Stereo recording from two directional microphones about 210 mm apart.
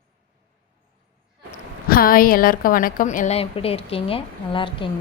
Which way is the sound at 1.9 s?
45° left (ahead or behind).